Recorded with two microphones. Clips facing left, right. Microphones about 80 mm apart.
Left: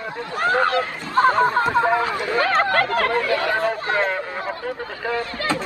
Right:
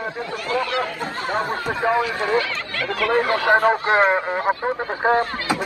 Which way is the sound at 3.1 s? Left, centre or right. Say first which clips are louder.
Right 3 dB; right.